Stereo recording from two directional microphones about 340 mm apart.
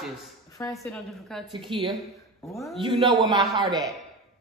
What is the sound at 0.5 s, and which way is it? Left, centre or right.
Speech, centre.